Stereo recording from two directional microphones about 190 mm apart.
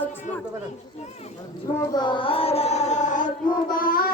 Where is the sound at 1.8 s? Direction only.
20° left (ahead or behind); by 3.3 s 40° left (ahead or behind).